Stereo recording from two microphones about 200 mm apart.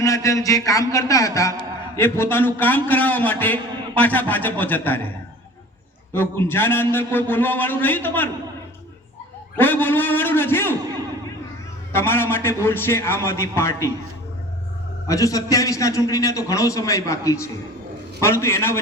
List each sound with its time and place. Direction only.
0.0 s a man's voice: 15° left (ahead or behind)
6.1 s a man's voice: 10° left (ahead or behind)
9.6 s a man's voice: 10° left (ahead or behind)
11.9 s a man's voice: 10° left (ahead or behind)
15.0 s a man's voice: 15° left (ahead or behind)